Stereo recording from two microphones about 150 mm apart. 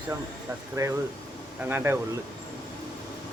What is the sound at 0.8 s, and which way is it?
Speech, 25° right (ahead or behind).